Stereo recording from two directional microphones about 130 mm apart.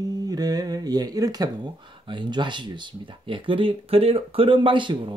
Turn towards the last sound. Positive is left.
turn(degrees=-40)  # may be behind; listen again after turning